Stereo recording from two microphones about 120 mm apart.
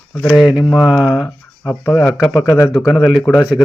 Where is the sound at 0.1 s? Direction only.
10° left (ahead or behind).